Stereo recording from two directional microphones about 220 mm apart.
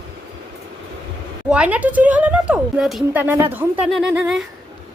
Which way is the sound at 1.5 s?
5° right (ahead or behind).